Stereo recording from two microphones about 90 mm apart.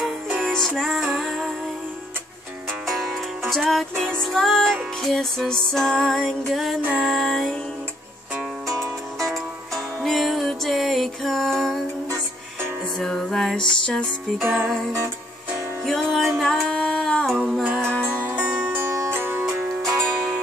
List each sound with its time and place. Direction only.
0.5 s music: 5° left (ahead or behind)
2.9 s music: centre (ahead or behind)
8.6 s music: 5° left (ahead or behind)
13.0 s music: 5° left (ahead or behind)
14.4 s music: 25° right (ahead or behind)
15.8 s music: centre (ahead or behind)
18.2 s music: 25° right (ahead or behind)
19.7 s music: 5° left (ahead or behind)